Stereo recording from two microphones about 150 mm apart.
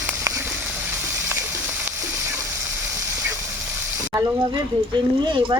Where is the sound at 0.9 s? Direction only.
15° right (ahead or behind).